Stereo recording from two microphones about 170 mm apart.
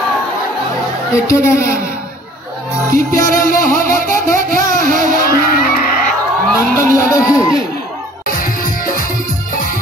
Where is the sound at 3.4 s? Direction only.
55° left (ahead or behind).